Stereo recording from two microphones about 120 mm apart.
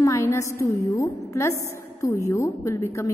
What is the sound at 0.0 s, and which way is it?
A woman's voice, 25° left (ahead or behind).